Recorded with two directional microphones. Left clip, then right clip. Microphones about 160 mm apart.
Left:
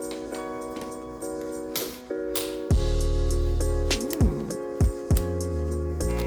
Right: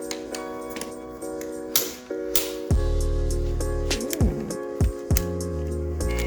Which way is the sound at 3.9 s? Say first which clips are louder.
Right 1 dB; centre (ahead or behind).